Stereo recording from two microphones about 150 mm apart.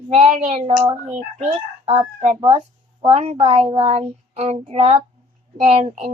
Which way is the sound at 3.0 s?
45° right (ahead or behind).